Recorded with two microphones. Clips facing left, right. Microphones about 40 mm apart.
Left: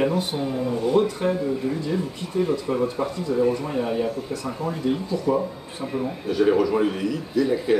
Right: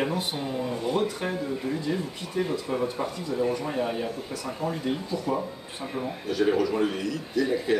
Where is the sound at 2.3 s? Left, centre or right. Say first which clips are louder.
Left 5 dB; right.